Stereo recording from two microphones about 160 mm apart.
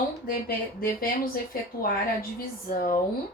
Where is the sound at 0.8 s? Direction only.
65° left (ahead or behind).